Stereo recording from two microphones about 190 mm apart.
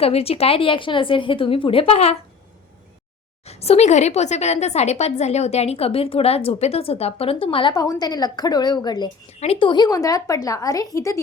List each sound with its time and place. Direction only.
0.0 s a woman's voice: 30° left (ahead or behind)
3.4 s a woman's voice: 35° left (ahead or behind); by 11.2 s 15° left (ahead or behind)